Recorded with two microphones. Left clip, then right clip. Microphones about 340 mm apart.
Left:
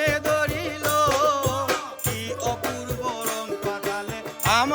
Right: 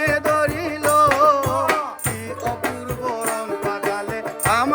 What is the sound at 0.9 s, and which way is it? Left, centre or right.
Music, centre.